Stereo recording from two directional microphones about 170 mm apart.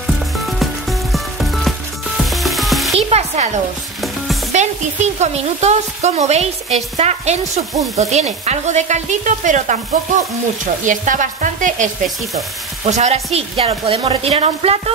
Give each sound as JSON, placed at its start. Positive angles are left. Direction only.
{"t": 0.0, "sound": "music", "side_deg": 0}
{"t": 2.1, "sound": "frying", "side_deg": 0}
{"t": 3.1, "sound": "a sound", "side_deg": -40}
{"t": 4.5, "sound": "speech", "side_deg": -45}
{"t": 8.0, "sound": "stir", "side_deg": -40}
{"t": 12.8, "sound": "speech", "side_deg": -40}